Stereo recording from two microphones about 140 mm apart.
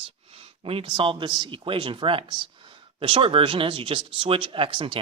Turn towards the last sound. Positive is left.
turn(degrees=-35)  # may be behind; listen again after turning